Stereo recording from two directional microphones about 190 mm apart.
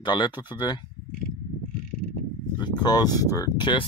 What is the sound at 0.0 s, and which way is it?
Speech, 25° left (ahead or behind).